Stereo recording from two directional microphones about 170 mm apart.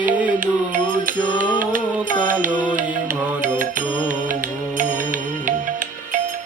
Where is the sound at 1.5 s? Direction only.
50° right (ahead or behind).